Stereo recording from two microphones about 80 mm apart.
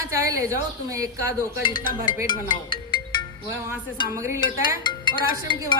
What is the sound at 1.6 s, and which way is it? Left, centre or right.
Speech, left.